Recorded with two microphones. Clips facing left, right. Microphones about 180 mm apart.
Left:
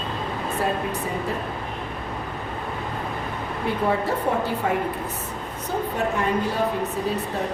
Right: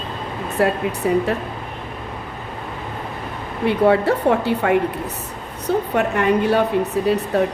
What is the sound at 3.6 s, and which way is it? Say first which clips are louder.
A woman's voice: right 8 dB; 70° right (ahead or behind).